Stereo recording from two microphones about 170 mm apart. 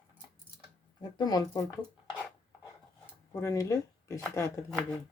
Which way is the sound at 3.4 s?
20° left (ahead or behind).